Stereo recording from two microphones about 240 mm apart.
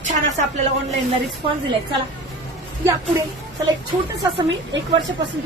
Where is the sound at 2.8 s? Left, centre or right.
Centre.